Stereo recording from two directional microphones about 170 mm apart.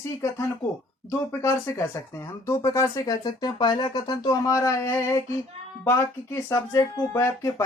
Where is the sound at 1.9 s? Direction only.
15° left (ahead or behind).